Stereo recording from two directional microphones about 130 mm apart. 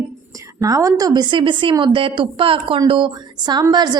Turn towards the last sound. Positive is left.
turn(degrees=-35)  # may be behind; listen again after turning